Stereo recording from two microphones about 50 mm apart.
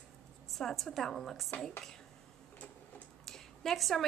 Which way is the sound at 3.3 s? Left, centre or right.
Centre.